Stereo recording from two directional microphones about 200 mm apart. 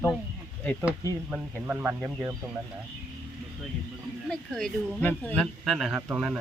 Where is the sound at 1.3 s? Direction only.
5° right (ahead or behind).